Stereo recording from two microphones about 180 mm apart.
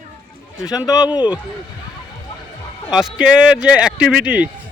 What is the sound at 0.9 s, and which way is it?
Speech, 20° left (ahead or behind).